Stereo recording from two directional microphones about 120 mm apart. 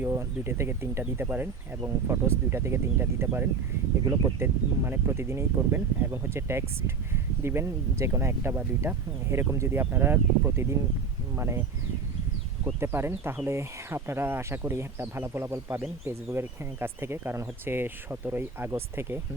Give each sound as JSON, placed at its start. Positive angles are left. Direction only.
{"t": 0.0, "sound": "speech", "side_deg": -20}
{"t": 12.8, "sound": "speech", "side_deg": -20}